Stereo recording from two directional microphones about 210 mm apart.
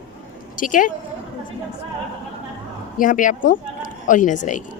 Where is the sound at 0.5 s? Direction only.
40° left (ahead or behind).